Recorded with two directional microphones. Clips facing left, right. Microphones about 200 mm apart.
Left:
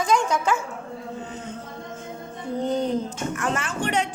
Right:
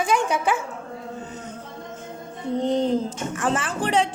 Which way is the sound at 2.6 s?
25° right (ahead or behind).